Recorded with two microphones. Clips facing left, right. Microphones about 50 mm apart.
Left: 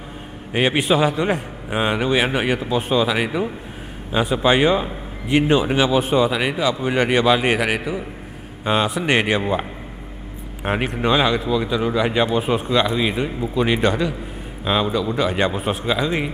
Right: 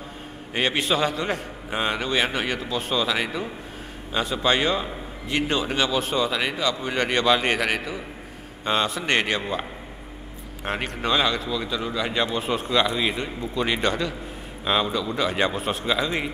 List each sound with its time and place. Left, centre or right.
0.5 s a man's voice: centre